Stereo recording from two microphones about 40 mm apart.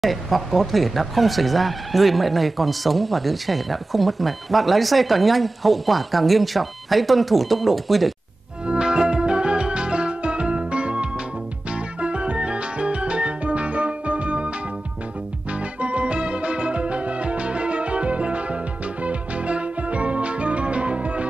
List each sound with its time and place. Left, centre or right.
0.0 s speech: centre
8.6 s music: right
15.5 s music: right